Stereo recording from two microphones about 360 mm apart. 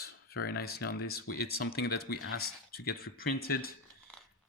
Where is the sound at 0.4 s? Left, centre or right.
Left.